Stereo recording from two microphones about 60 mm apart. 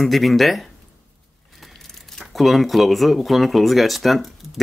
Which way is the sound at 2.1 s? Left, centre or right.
Centre.